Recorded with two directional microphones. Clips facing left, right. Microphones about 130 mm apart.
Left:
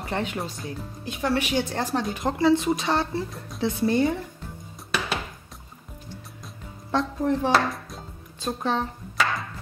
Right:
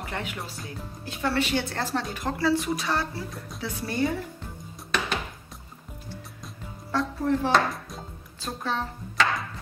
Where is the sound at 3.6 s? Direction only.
25° left (ahead or behind).